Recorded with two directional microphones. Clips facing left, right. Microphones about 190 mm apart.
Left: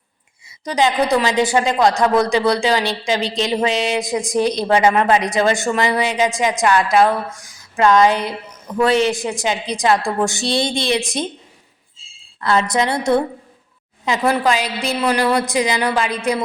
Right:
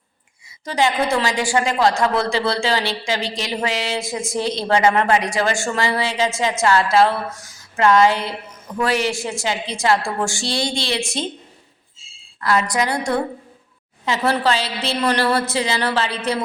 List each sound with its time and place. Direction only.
0.6 s a man's voice: 20° left (ahead or behind)
12.4 s a woman's voice: 25° left (ahead or behind)